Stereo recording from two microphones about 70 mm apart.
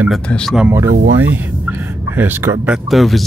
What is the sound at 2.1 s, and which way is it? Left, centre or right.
Speech, right.